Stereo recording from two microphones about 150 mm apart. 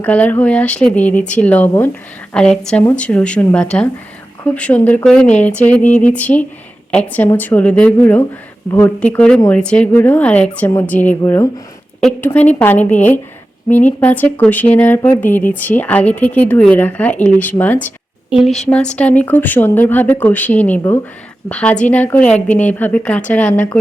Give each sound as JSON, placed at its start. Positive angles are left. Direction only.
{"t": 0.0, "sound": "a woman's voice", "side_deg": 10}
{"t": 18.3, "sound": "a woman's voice", "side_deg": 0}